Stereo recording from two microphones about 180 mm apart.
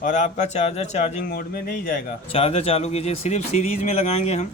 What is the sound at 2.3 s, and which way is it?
Speech, 30° left (ahead or behind).